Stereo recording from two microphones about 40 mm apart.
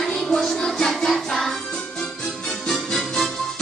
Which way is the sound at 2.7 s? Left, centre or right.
Centre.